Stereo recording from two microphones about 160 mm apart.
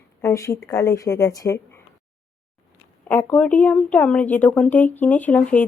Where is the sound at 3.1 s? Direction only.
10° left (ahead or behind).